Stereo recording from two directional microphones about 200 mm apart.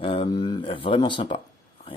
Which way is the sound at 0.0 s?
25° left (ahead or behind).